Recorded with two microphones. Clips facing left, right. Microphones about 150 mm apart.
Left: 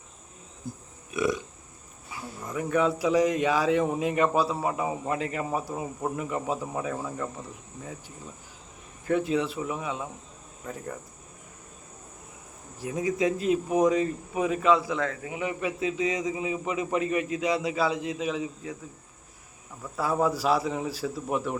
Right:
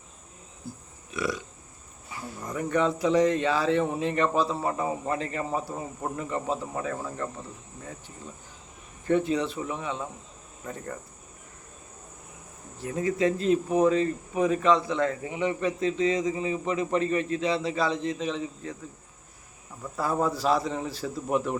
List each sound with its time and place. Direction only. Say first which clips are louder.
0.7 s burping: left 2 dB; 20° left (ahead or behind)
2.4 s a man's voice: even; 5° left (ahead or behind)
9.0 s speech: right 1 dB; 5° left (ahead or behind)
12.8 s a man's voice: right 1 dB; 15° left (ahead or behind)
20.0 s a man's voice: left 1 dB; 5° left (ahead or behind)